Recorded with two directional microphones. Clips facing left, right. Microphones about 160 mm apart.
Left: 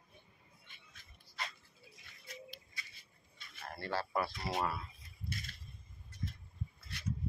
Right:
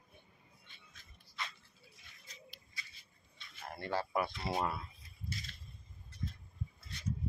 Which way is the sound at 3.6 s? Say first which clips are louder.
Right 1 dB; 20° right (ahead or behind).